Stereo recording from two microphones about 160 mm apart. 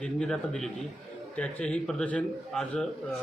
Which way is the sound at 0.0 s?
5° left (ahead or behind).